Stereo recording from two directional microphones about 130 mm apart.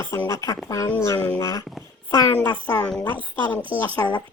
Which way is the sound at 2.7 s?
15° left (ahead or behind).